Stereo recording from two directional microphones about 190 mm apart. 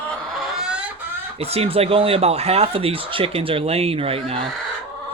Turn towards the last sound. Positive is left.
turn(degrees=-30)  # may be behind; listen again after turning